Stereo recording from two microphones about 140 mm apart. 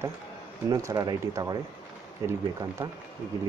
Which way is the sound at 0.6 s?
25° right (ahead or behind).